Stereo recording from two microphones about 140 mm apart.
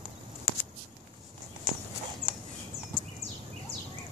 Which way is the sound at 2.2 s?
55° right (ahead or behind).